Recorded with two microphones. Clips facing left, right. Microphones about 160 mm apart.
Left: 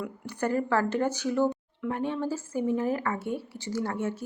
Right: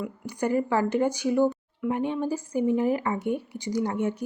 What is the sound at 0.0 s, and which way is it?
Speech, 10° right (ahead or behind).